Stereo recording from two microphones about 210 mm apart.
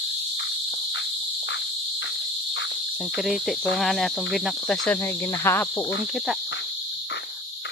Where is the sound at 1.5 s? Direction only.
60° left (ahead or behind).